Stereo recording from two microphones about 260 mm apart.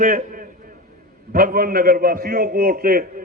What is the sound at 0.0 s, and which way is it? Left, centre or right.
A man's voice, right.